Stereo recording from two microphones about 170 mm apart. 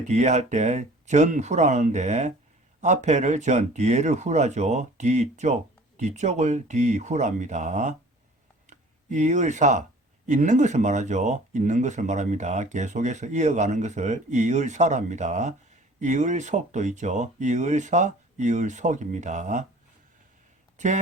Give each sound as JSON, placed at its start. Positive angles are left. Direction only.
{"t": 0.1, "sound": "speech", "side_deg": -45}
{"t": 8.6, "sound": "a sound", "side_deg": -45}
{"t": 10.2, "sound": "speech", "side_deg": -45}
{"t": 20.7, "sound": "speech", "side_deg": -45}